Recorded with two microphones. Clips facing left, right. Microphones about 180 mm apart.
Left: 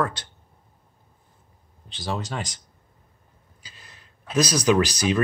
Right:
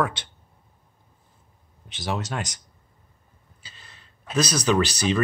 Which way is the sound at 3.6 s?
10° left (ahead or behind).